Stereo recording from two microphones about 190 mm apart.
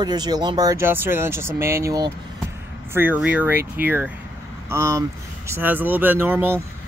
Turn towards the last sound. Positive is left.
turn(degrees=-10)  # may be behind; listen again after turning